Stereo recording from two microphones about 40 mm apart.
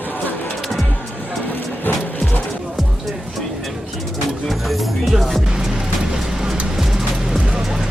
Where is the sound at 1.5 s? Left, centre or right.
Left.